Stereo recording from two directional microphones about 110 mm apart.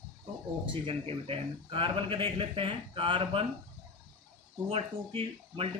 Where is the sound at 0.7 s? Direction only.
55° right (ahead or behind).